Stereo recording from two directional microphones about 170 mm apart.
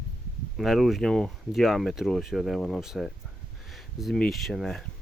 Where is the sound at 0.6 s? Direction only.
Centre (ahead or behind).